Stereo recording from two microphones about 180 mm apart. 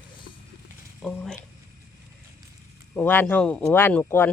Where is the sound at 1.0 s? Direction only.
Centre (ahead or behind).